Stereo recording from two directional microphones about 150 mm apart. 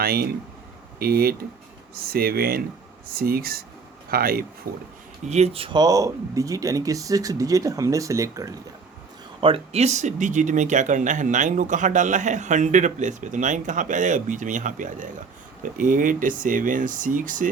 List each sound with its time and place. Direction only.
0.0 s speech: 90° right
4.7 s speech: 75° right (ahead or behind)
5.2 s speech: 45° right (ahead or behind); by 8.5 s 20° right (ahead or behind)
9.4 s speech: 40° right (ahead or behind); by 17.5 s 60° right (ahead or behind)